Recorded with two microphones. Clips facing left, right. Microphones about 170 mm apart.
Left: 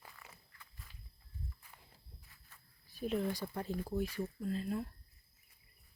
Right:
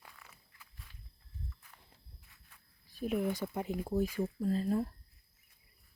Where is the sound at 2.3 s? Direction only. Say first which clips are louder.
Even; centre (ahead or behind); by 3.9 s 15° right (ahead or behind).